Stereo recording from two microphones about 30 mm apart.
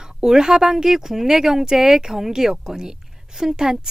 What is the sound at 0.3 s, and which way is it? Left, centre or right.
A woman's voice, centre.